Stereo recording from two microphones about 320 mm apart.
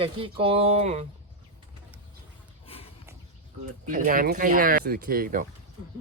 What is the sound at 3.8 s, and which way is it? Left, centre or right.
Speech, right.